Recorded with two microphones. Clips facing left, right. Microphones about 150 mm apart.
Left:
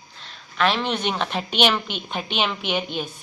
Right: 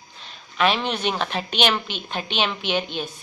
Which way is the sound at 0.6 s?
10° right (ahead or behind).